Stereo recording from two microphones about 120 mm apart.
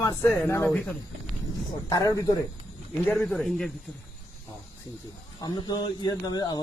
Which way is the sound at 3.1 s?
Centre (ahead or behind).